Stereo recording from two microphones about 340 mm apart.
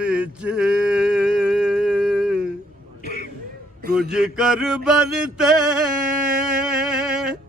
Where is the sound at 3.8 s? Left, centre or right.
Right.